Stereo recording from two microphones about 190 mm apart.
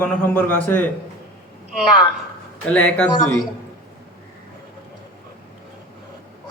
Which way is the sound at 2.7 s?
5° left (ahead or behind).